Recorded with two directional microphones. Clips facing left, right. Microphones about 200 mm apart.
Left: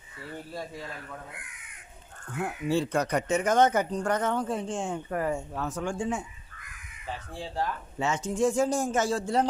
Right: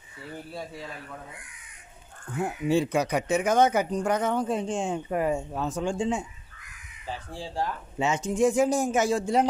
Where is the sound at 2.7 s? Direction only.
10° right (ahead or behind).